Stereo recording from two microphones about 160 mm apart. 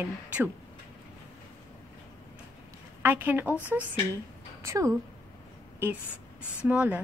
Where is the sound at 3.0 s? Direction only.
15° right (ahead or behind).